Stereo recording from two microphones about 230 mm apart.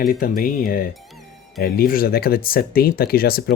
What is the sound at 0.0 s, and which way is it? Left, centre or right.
Speech, left.